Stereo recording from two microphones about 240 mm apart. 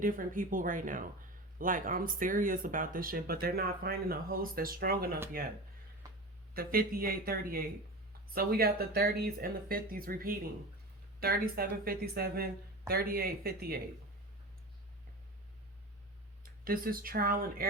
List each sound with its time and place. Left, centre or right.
0.0 s speech: right
6.5 s speech: right
16.4 s speech: right